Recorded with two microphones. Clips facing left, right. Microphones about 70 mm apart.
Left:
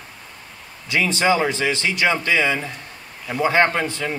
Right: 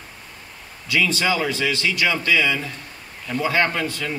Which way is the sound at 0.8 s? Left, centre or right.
Left.